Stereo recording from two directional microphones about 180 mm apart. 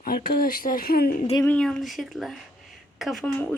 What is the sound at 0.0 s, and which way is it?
Speech, 55° left (ahead or behind).